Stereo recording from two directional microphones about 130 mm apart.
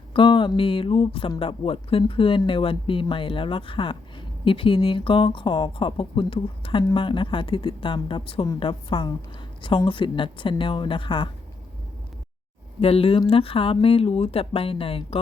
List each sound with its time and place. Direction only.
0.1 s speech: 40° left (ahead or behind)
12.8 s speech: 50° left (ahead or behind)